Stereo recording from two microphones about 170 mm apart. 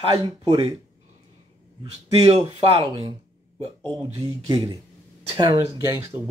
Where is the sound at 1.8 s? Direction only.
35° right (ahead or behind).